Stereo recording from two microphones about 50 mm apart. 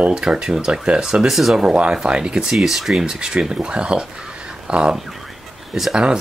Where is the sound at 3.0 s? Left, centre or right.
Centre.